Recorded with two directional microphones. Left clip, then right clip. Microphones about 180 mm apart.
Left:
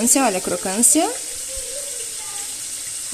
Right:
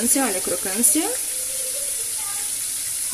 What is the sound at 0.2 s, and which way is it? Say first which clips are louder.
Speech: left 4 dB; 25° left (ahead or behind).